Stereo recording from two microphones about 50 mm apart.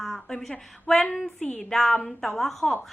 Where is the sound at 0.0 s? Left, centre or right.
Centre.